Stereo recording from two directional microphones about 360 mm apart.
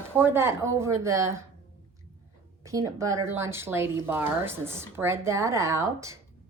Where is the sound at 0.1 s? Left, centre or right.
Centre.